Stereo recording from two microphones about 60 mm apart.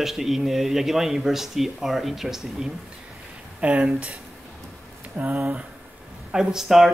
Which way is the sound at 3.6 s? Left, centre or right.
Right.